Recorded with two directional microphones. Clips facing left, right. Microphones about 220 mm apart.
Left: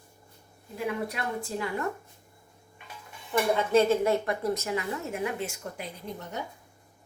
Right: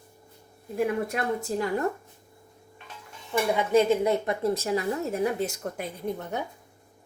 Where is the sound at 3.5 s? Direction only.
15° right (ahead or behind); by 5.8 s 45° right (ahead or behind).